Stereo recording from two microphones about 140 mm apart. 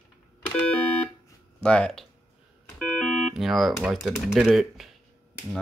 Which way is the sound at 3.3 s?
Centre (ahead or behind).